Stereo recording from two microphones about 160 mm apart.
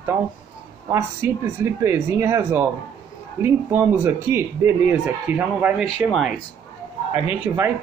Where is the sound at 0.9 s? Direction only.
15° right (ahead or behind).